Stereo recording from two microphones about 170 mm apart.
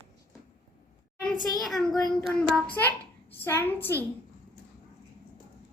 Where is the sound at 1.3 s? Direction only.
25° left (ahead or behind).